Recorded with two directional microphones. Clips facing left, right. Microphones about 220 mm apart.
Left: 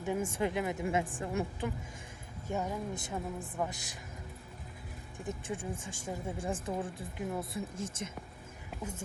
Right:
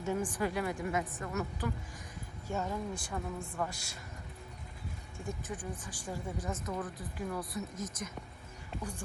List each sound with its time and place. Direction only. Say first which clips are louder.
0.0 s speech: left 1 dB; 20° left (ahead or behind)
2.5 s speech: left 1 dB; 15° left (ahead or behind)
5.1 s speech: left 3 dB; 20° left (ahead or behind)